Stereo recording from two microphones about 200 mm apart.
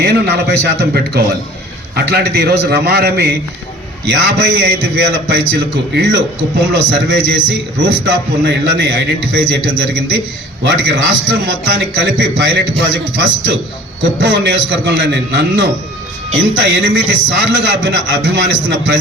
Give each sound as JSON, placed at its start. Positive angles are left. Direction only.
{"t": 0.0, "sound": "a man's voice", "side_deg": -55}